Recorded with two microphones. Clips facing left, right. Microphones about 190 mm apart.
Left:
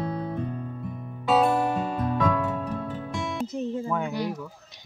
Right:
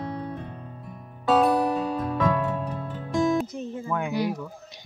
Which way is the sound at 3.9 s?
5° right (ahead or behind).